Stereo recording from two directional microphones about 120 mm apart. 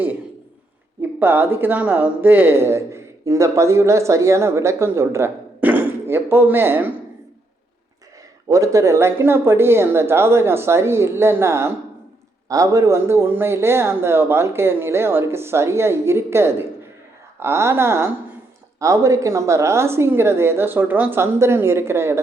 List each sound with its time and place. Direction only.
1.2 s speech: 15° right (ahead or behind)
8.4 s speech: 25° right (ahead or behind)